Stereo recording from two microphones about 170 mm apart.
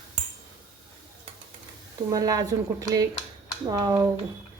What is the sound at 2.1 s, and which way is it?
Cutlery, 20° right (ahead or behind).